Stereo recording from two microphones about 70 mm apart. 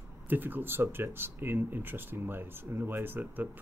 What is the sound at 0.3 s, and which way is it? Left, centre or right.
Speech, right.